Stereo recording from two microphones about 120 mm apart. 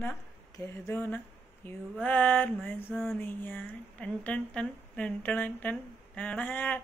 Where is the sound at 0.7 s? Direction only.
20° left (ahead or behind).